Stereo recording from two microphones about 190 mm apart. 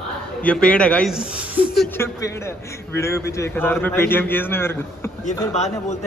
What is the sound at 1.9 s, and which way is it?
A man's voice, 15° left (ahead or behind).